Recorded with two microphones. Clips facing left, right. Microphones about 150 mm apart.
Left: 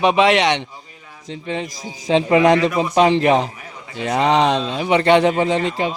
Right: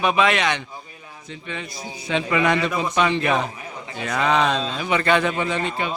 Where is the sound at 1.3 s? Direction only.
30° left (ahead or behind).